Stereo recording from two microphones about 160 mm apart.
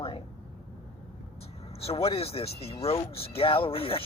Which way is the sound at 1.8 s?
35° left (ahead or behind).